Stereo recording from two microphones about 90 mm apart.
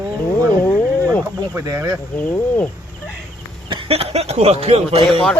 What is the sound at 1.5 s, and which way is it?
Speech, 30° right (ahead or behind).